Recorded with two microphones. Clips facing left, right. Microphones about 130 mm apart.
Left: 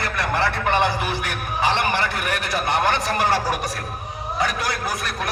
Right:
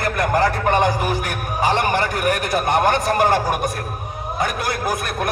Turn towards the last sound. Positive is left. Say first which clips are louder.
# right 4 dB
turn(degrees=-50)  # may be behind; listen again after turning